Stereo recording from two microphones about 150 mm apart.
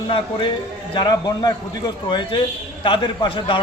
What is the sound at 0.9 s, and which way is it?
A man's voice, 25° left (ahead or behind).